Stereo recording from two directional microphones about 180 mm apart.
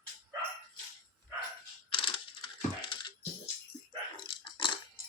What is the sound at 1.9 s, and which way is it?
Music, 30° left (ahead or behind).